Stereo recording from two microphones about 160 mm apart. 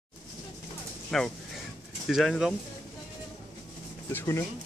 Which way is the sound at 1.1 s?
Centre (ahead or behind).